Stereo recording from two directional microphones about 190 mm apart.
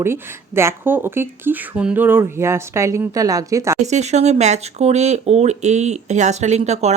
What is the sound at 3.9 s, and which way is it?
Speech, 35° right (ahead or behind).